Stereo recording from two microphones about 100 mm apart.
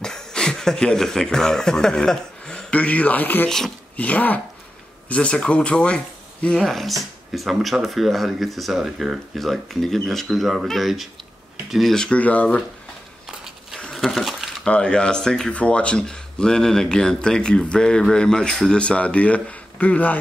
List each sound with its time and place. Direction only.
0.0 s speech: 5° left (ahead or behind)
3.4 s speech: 5° left (ahead or behind)
13.7 s a sound: 5° left (ahead or behind)
14.7 s speech: 10° left (ahead or behind)